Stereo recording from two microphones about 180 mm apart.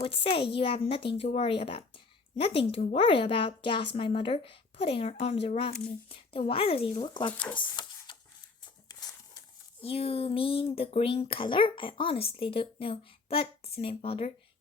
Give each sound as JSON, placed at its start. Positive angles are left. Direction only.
{"t": 0.0, "sound": "speech", "side_deg": 30}
{"t": 7.5, "sound": "a sound", "side_deg": 25}
{"t": 9.8, "sound": "speech", "side_deg": 35}